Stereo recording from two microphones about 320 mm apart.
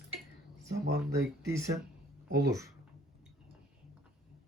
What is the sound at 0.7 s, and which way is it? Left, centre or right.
Speech, right.